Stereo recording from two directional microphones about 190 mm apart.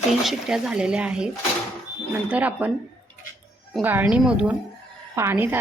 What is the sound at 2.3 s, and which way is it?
A woman's voice, 5° right (ahead or behind).